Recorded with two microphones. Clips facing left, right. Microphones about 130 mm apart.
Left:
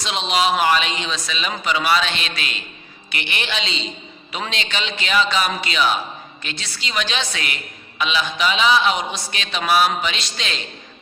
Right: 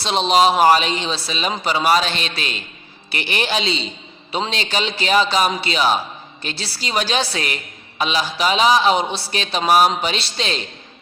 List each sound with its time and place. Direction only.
0.0 s a woman's voice: 35° right (ahead or behind)